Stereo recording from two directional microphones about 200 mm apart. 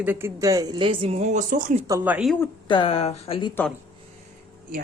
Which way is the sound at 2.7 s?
25° left (ahead or behind).